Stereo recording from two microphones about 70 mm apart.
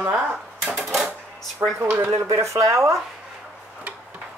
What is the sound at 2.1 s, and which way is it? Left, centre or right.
Speech, right.